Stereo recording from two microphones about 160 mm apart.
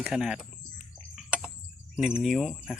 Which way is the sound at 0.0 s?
5° right (ahead or behind).